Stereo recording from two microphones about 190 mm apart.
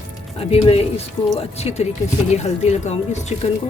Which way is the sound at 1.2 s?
20° left (ahead or behind).